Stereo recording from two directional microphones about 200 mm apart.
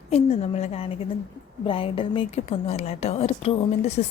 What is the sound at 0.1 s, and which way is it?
A woman's voice, 30° left (ahead or behind).